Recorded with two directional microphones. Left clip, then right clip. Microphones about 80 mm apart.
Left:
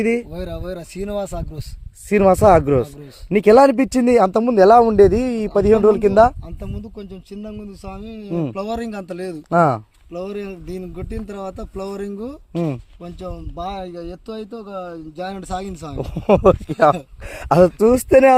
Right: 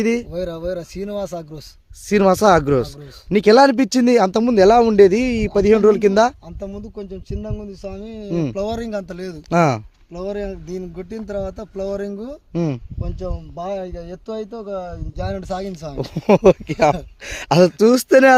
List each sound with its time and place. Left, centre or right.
0.0 s speech: right
0.3 s speech: right
2.3 s speech: centre; by 5.7 s right
5.7 s speech: right
16.0 s speech: right